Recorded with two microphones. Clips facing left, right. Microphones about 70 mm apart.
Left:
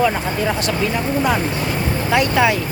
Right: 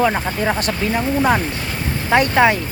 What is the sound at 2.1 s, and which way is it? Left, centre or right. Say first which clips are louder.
Speech: right 3 dB; right.